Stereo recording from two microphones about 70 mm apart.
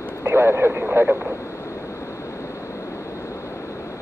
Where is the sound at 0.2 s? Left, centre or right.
Right.